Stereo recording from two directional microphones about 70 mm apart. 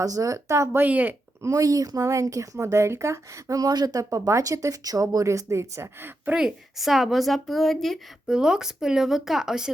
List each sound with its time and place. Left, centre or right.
0.0 s speech: right
0.8 s speech: right
1.4 s speech: right
3.7 s speech: right
6.3 s speech: centre
8.3 s speech: centre